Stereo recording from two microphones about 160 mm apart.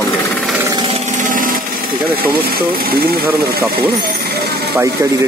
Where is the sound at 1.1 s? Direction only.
55° right (ahead or behind).